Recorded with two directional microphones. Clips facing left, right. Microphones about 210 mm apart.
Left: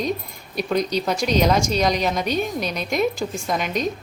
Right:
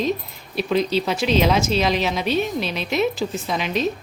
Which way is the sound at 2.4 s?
45° left (ahead or behind).